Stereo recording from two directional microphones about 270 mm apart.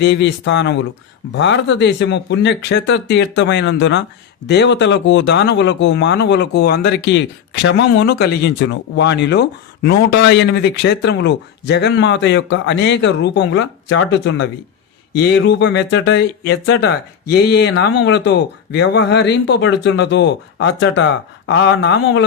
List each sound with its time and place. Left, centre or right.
0.0 s speech: left